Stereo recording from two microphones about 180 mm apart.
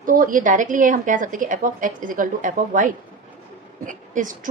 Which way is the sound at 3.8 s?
45° right (ahead or behind).